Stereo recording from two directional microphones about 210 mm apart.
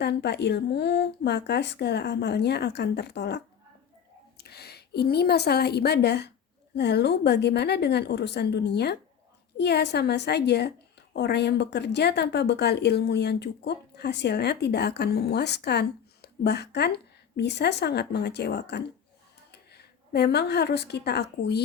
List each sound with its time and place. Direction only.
0.0 s a woman's voice: 55° left (ahead or behind)